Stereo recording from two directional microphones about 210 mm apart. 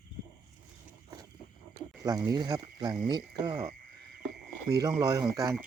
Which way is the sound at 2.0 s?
15° right (ahead or behind).